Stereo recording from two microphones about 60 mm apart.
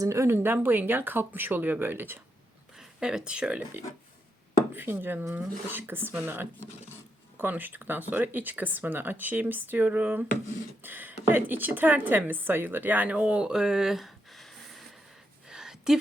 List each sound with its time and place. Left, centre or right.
0.0 s speech: right
0.3 s speech: right
2.7 s speech: centre
4.7 s a woman's voice: right; by 14.8 s centre
15.4 s a sound: centre